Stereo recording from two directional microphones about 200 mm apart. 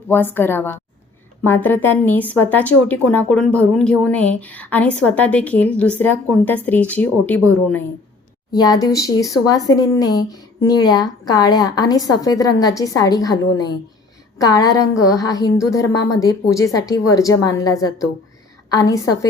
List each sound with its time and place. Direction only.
0.1 s a woman's voice: 10° left (ahead or behind)
8.5 s a woman's voice: 20° left (ahead or behind)